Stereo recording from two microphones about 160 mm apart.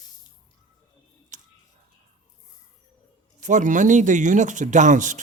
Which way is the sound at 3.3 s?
50° right (ahead or behind).